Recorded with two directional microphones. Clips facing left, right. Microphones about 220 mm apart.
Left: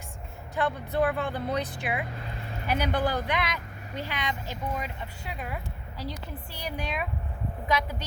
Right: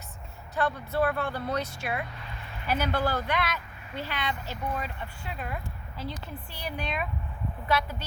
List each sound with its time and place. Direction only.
0.5 s speech: 15° left (ahead or behind)